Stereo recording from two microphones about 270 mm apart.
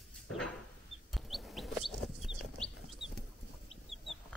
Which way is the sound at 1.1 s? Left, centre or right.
Centre.